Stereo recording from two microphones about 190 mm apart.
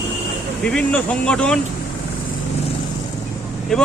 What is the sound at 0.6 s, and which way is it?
Speech, 5° left (ahead or behind).